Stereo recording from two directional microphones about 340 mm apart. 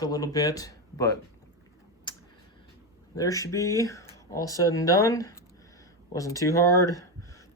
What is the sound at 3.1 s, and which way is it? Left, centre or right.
Speech, centre.